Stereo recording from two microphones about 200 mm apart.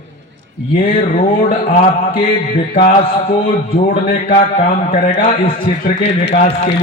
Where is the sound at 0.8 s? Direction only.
45° left (ahead or behind).